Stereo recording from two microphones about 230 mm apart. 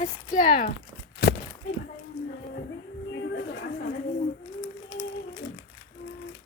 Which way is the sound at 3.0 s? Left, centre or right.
Left.